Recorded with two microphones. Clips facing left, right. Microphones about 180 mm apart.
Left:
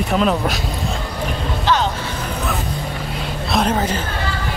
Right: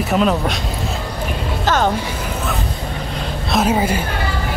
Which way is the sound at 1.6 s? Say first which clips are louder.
Right 2 dB; 50° right (ahead or behind).